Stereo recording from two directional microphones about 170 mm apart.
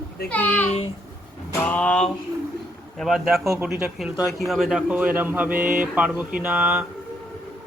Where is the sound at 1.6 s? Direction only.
10° left (ahead or behind).